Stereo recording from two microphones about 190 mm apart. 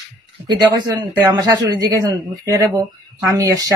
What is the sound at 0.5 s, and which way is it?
A man's voice, 20° right (ahead or behind).